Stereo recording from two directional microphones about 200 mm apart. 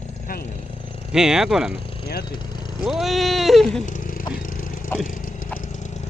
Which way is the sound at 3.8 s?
40° left (ahead or behind).